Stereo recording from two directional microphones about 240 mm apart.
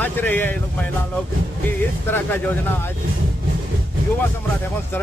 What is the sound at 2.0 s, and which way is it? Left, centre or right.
Speech, centre.